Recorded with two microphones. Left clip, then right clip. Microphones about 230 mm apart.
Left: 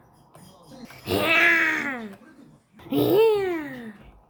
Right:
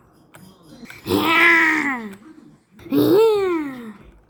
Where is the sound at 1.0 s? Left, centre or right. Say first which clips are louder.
Right 4 dB; centre.